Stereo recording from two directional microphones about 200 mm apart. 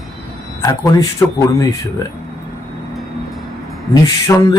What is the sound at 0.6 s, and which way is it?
A man's voice, 15° left (ahead or behind).